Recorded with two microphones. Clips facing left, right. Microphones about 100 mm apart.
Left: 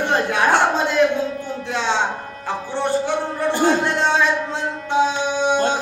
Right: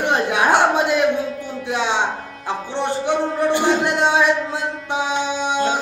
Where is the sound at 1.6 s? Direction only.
15° right (ahead or behind).